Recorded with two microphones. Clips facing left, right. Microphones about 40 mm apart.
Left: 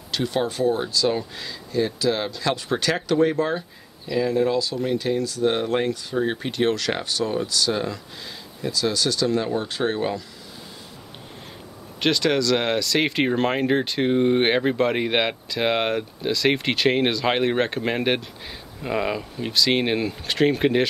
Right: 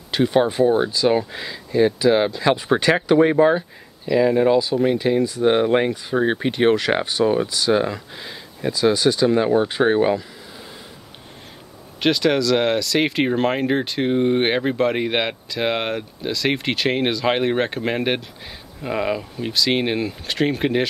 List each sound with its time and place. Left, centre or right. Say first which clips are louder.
0.1 s speech: right 6 dB; right
12.0 s speech: right 3 dB; centre